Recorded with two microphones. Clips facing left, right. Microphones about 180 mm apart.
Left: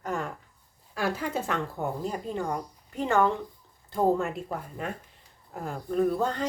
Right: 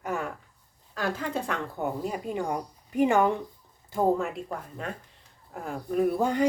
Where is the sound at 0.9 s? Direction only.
10° left (ahead or behind); by 3.4 s 15° right (ahead or behind).